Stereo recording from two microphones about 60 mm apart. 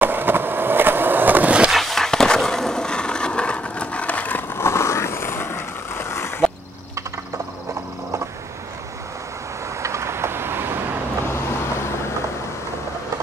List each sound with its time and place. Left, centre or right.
0.0 s skateboard: right
1.7 s wood: centre; by 4.5 s left
4.6 s vehicle: left
9.8 s vehicle: right
11.2 s vehicle: left